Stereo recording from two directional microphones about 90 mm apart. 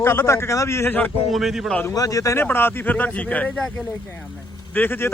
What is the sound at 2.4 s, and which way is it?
Speech, 25° left (ahead or behind).